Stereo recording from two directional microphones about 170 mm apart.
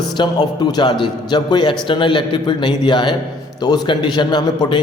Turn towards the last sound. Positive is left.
turn(degrees=25)  # may be behind; listen again after turning